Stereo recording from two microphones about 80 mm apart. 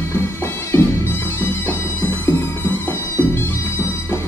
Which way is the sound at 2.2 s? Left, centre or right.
Left.